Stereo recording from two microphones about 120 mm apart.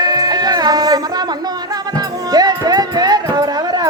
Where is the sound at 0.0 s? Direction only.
35° right (ahead or behind).